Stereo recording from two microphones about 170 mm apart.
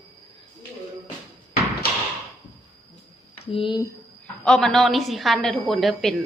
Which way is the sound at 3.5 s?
30° left (ahead or behind).